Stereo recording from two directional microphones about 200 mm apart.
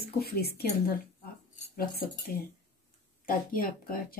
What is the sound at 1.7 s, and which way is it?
Speech, 50° left (ahead or behind).